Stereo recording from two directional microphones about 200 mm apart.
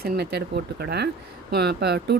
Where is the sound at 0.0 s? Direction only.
50° right (ahead or behind).